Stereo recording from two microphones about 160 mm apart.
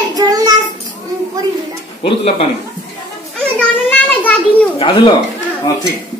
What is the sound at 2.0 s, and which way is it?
Speech, 35° left (ahead or behind).